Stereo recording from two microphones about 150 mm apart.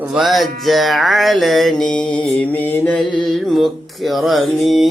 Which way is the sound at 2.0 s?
30° left (ahead or behind).